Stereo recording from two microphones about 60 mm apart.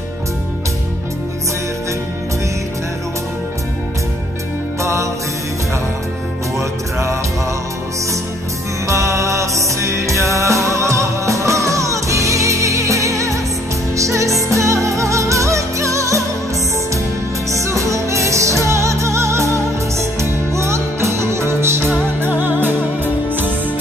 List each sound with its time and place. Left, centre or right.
8.8 s music: right
17.5 s music: right
21.9 s music: right